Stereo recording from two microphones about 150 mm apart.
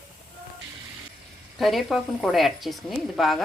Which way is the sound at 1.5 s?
Centre (ahead or behind).